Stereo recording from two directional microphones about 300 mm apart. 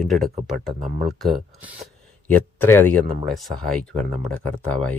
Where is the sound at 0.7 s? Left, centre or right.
Right.